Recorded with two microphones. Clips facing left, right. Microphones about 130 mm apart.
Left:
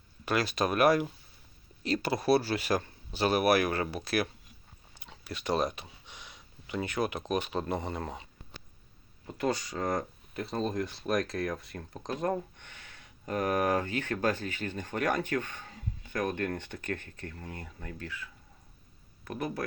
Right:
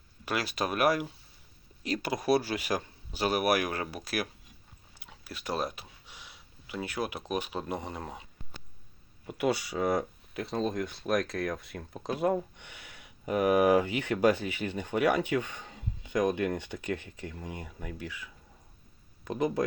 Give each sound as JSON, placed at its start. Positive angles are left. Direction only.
{"t": 0.3, "sound": "speech", "side_deg": -10}